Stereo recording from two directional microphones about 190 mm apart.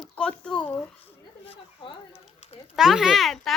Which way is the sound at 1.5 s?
30° left (ahead or behind).